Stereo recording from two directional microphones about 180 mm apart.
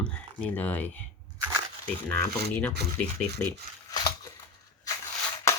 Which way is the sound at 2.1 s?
10° left (ahead or behind).